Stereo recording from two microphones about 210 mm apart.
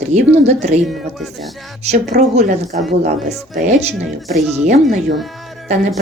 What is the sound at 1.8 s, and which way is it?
Speech, 30° right (ahead or behind).